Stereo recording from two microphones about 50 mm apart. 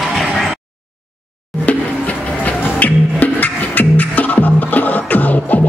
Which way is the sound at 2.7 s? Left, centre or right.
Left.